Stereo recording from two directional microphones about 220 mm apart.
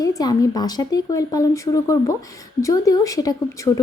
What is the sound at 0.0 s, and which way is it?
Speech, 15° left (ahead or behind).